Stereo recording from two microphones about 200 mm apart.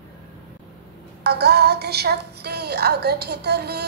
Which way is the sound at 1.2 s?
55° right (ahead or behind).